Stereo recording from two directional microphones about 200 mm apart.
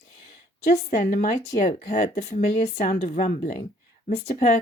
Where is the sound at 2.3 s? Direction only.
35° left (ahead or behind).